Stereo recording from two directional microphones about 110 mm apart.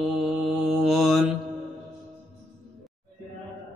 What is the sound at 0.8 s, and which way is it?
Mantra, centre (ahead or behind).